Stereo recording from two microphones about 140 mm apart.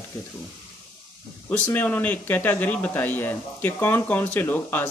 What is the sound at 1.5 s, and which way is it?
A man's voice, 10° left (ahead or behind).